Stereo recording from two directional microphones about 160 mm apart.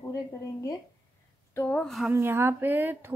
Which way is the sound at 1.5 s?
10° left (ahead or behind).